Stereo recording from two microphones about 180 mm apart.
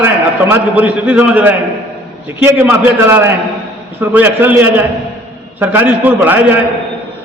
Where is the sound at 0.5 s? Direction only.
10° right (ahead or behind).